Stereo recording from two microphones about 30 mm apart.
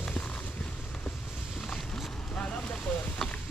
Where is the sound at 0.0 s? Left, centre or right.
Left.